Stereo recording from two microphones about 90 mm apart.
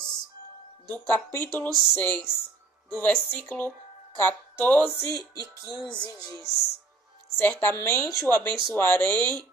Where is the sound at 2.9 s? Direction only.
20° left (ahead or behind).